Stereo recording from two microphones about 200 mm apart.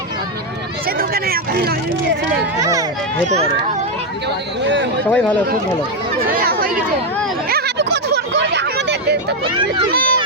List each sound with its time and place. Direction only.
0.9 s a sound: 50° right (ahead or behind)
2.6 s speech: 15° right (ahead or behind)
3.2 s speech: 35° right (ahead or behind)
5.0 s speech: 5° left (ahead or behind)
6.4 s chatter: 45° right (ahead or behind)
7.5 s a sound: 55° right (ahead or behind)
9.9 s speech: 45° right (ahead or behind)